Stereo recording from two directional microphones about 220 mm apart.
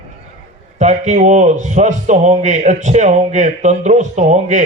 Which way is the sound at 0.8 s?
30° right (ahead or behind).